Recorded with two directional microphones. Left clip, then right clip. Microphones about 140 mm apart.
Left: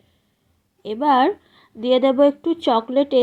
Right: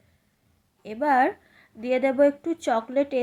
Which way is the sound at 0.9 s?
20° left (ahead or behind).